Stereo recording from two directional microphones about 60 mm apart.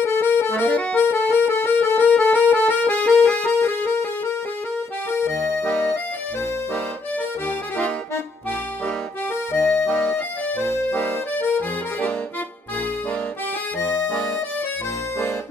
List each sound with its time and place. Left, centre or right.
0.0 s accordion: left
0.7 s accordion: left
1.0 s music: left
7.4 s accordion: left
9.5 s music: left
9.8 s music: centre
10.1 s music: left
10.9 s accordion: left
13.7 s accordion: left